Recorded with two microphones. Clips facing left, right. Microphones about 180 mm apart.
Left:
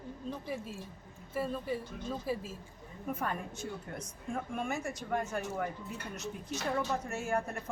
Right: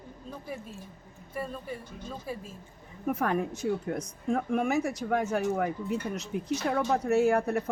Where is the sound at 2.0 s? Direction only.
5° left (ahead or behind).